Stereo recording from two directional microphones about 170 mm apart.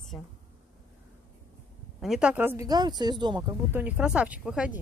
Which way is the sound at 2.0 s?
5° right (ahead or behind).